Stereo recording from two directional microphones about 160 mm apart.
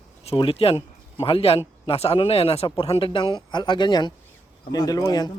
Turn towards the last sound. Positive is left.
turn(degrees=25)  # may be behind; listen again after turning